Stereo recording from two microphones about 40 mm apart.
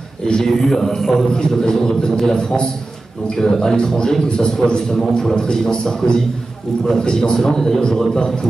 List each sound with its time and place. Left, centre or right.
0.2 s a man's voice: centre
3.3 s a man's voice: centre